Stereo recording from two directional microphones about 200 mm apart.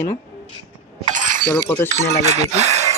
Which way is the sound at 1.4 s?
10° left (ahead or behind).